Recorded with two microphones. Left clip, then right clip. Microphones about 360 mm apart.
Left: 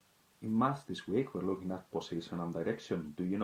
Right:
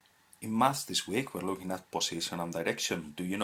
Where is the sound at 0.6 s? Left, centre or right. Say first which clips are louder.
Right 6 dB; right.